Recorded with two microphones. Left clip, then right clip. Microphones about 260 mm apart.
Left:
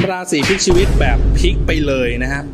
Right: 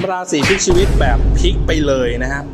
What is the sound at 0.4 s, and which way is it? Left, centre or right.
Speech, centre.